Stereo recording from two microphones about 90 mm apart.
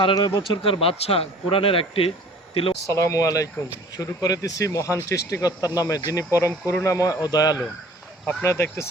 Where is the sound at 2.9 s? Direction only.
35° left (ahead or behind).